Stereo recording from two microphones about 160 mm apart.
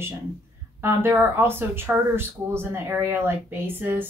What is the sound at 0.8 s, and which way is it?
Speech, 15° right (ahead or behind).